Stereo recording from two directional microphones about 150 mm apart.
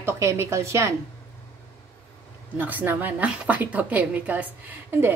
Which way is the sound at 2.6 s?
10° right (ahead or behind).